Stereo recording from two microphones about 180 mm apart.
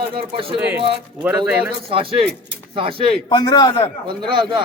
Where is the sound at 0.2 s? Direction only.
30° right (ahead or behind).